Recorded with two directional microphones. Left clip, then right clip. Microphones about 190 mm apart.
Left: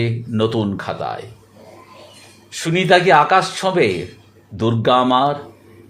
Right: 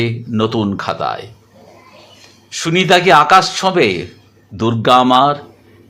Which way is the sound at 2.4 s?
20° right (ahead or behind).